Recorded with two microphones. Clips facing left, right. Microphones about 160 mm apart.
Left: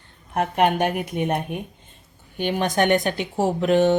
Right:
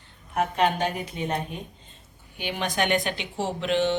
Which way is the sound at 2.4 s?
50° left (ahead or behind).